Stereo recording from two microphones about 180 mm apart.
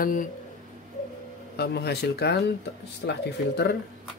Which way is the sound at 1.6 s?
65° left (ahead or behind).